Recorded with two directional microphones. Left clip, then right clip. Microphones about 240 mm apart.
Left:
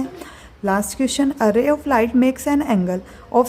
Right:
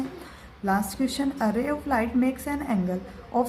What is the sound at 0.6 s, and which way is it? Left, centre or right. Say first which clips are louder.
A woman's voice: left 6 dB; left.